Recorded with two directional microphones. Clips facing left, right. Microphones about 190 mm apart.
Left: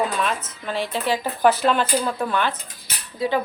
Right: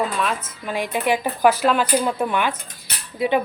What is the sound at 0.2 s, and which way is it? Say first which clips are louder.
Speech: right 1 dB; 5° right (ahead or behind).